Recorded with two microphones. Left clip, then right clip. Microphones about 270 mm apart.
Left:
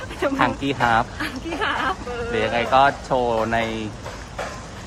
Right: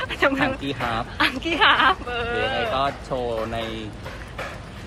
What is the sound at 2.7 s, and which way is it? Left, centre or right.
Speech, left.